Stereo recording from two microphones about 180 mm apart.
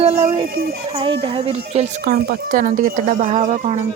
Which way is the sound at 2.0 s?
60° right (ahead or behind).